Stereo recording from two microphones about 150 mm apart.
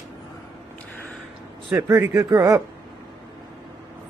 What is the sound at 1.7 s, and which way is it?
Speech, 20° right (ahead or behind).